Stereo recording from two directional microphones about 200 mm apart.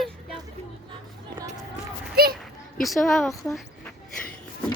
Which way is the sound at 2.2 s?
50° right (ahead or behind).